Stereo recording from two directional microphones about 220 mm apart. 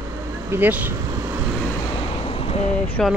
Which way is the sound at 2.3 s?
25° left (ahead or behind).